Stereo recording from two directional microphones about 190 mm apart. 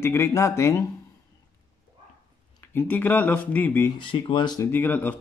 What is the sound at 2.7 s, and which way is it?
Speech, 10° left (ahead or behind).